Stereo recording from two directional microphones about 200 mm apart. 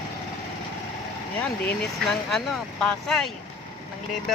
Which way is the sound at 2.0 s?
Centre (ahead or behind).